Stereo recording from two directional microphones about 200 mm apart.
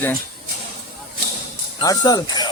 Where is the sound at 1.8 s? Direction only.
20° left (ahead or behind).